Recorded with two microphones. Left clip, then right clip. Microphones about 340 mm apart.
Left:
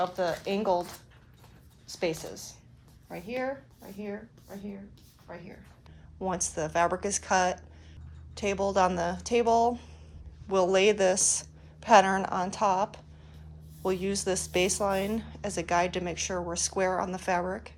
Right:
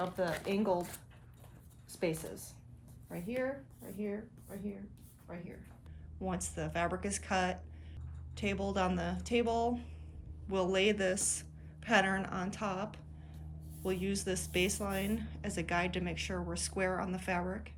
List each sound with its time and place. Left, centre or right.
0.2 s a woman's voice: centre
1.9 s a woman's voice: left
5.3 s a woman's voice: left
6.1 s a woman's voice: centre